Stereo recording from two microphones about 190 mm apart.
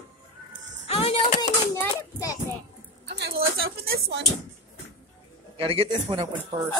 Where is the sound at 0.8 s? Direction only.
30° left (ahead or behind).